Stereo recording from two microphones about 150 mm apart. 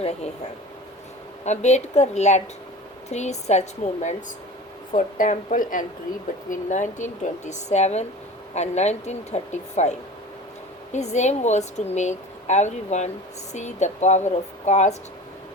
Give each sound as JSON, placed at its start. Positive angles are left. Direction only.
{"t": 0.0, "sound": "a woman's voice", "side_deg": 45}
{"t": 1.5, "sound": "a woman's voice", "side_deg": 50}
{"t": 4.9, "sound": "a woman's voice", "side_deg": 60}
{"t": 10.9, "sound": "a woman's voice", "side_deg": 50}